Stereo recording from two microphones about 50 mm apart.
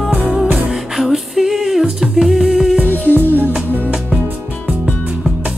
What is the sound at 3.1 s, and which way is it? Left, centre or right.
Music, right.